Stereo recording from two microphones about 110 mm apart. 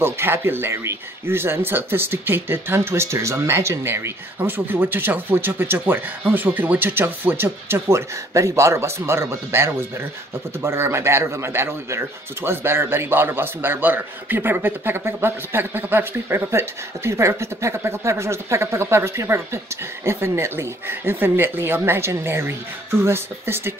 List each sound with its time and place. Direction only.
0.0 s speech: 20° right (ahead or behind)